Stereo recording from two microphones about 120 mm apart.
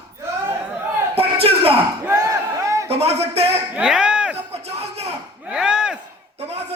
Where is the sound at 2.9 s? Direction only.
60° right (ahead or behind).